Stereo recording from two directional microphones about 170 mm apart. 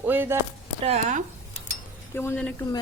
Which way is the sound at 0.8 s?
40° right (ahead or behind).